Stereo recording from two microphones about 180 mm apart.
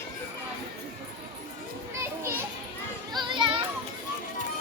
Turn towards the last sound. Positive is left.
turn(degrees=-25)  # may be behind; listen again after turning